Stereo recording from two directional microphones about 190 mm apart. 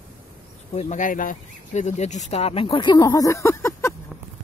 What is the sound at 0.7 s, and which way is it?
Speech, 45° left (ahead or behind).